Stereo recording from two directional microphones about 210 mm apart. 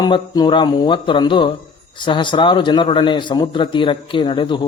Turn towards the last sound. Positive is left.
turn(degrees=20)  # may be behind; listen again after turning